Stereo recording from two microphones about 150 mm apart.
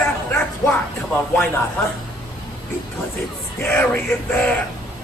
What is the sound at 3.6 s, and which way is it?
Speech, 15° left (ahead or behind).